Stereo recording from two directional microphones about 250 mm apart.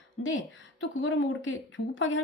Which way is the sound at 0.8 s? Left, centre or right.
Left.